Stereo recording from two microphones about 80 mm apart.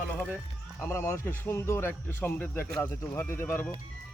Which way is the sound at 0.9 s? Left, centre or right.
Left.